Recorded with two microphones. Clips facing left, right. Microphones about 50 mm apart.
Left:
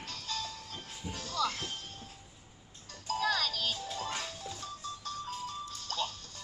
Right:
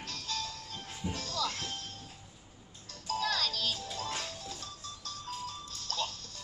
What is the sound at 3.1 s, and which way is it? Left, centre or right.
Music, centre.